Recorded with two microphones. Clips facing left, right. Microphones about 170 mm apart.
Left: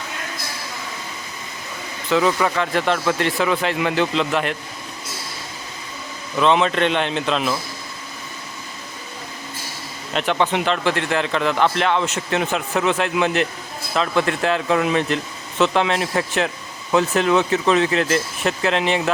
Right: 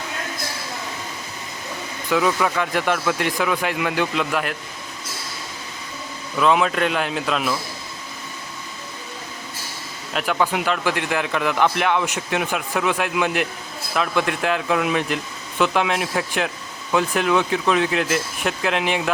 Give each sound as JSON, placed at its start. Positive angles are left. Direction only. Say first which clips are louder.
{"t": 2.0, "sound": "a man's voice", "louder": "left 2 dB", "side_deg": -5}
{"t": 3.3, "sound": "a man's voice", "louder": "left 2 dB", "side_deg": 5}
{"t": 6.4, "sound": "speech", "louder": "left 1 dB", "side_deg": -5}
{"t": 10.1, "sound": "a man's voice", "louder": "left 2 dB", "side_deg": -5}